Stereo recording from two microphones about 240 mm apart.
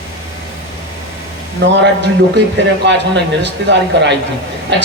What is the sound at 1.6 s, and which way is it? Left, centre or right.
Speech, right.